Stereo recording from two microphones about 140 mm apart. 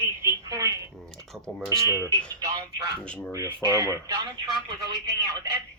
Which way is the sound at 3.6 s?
25° right (ahead or behind).